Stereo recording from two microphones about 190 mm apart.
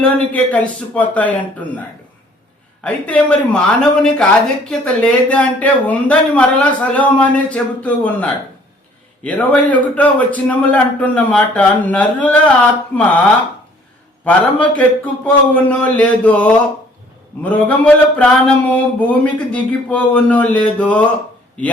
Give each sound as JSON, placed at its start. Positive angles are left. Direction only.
{"t": 0.0, "sound": "speech", "side_deg": 5}
{"t": 2.8, "sound": "a man's voice", "side_deg": 5}
{"t": 14.3, "sound": "speech", "side_deg": 5}